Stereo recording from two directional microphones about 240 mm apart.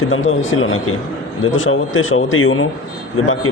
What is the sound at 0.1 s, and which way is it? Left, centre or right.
A man's voice, left.